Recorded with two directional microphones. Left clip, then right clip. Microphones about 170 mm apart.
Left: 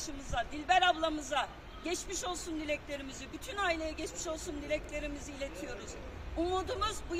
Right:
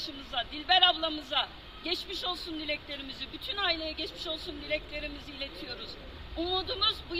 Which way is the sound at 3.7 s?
50° left (ahead or behind).